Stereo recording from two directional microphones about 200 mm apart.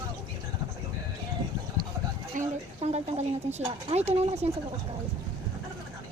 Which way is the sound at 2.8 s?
30° right (ahead or behind).